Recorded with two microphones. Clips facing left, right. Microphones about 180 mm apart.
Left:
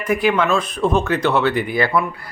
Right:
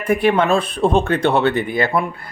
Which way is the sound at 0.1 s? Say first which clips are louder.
Right 2 dB; 30° right (ahead or behind).